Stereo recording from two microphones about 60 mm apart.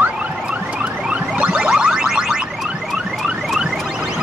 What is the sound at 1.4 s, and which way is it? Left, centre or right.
Music, centre.